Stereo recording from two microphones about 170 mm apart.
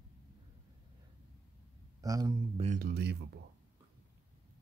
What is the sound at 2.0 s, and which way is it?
Speech, 20° right (ahead or behind).